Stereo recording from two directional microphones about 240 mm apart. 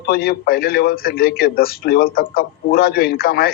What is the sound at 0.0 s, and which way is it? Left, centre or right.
A man's voice, left.